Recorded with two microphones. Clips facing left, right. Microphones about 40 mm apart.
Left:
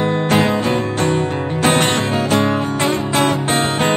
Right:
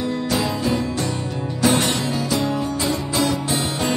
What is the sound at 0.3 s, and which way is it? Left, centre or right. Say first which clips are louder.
Music: left 5 dB; left.